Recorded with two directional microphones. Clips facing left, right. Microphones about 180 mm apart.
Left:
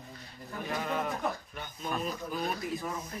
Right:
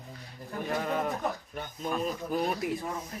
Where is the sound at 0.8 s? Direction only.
40° right (ahead or behind).